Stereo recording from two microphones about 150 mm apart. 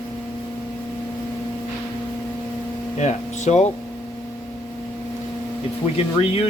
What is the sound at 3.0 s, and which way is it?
Speech, 50° left (ahead or behind).